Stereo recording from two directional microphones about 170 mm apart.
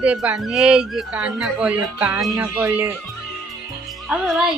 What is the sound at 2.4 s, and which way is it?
Speech, 10° right (ahead or behind).